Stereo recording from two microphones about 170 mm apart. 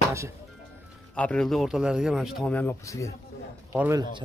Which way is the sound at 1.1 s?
5° left (ahead or behind).